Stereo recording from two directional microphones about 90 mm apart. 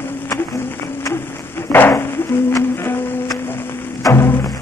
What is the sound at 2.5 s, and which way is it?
Music, 35° left (ahead or behind).